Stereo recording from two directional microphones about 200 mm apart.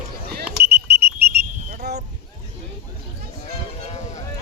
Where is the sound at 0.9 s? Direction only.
55° right (ahead or behind).